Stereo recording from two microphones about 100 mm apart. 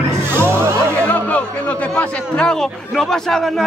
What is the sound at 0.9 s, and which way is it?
Music, 15° left (ahead or behind).